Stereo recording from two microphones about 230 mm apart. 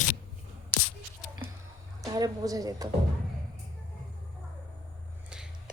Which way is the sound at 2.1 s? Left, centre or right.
Centre.